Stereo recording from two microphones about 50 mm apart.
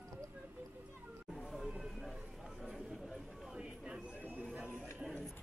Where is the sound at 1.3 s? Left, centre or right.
Centre.